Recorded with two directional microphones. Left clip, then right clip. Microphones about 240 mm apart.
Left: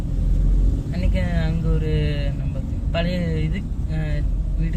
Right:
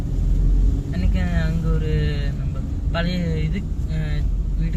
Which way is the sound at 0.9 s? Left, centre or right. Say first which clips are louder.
Left 2 dB; left.